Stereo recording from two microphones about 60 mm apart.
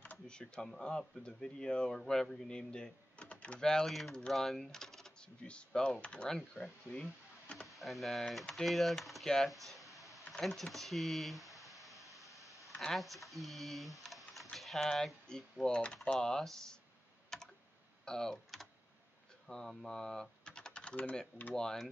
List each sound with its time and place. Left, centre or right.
0.3 s speech: centre
7.6 s speech: centre
9.5 s a sound: centre
10.4 s speech: centre
12.2 s a sound: centre
12.9 s speech: centre
17.3 s typing: centre
18.0 s speech: centre
19.4 s speech: centre; by 21.5 s left
21.5 s speech: centre